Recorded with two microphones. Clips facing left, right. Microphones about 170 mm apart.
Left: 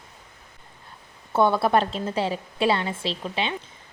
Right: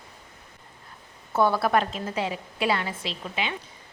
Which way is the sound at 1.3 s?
25° left (ahead or behind).